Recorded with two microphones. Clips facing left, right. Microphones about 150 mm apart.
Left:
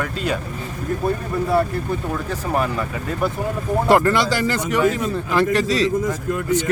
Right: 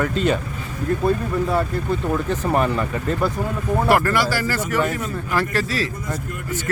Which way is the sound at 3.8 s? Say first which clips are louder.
Left 3 dB; 20° left (ahead or behind).